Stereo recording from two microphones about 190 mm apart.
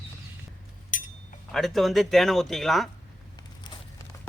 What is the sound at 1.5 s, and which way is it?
Speech, centre (ahead or behind).